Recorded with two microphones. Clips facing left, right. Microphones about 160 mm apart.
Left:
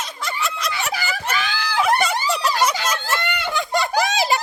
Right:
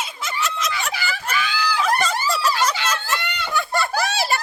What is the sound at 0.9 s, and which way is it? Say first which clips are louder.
Screaming: left 1 dB; 40° left (ahead or behind).